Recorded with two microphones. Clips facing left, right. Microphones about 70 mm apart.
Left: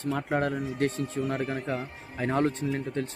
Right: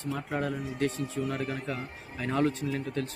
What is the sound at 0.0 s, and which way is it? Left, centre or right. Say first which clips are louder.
Speech: left 4 dB; left.